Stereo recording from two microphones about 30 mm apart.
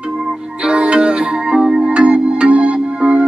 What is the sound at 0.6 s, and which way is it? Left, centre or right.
Music, right.